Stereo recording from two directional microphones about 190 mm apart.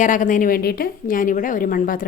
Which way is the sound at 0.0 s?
40° left (ahead or behind).